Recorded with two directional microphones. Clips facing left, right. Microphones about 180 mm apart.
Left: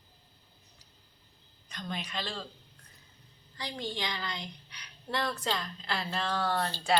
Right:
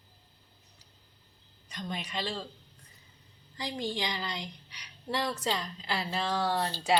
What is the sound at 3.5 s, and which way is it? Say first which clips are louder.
A woman's voice: right 3 dB; 20° right (ahead or behind).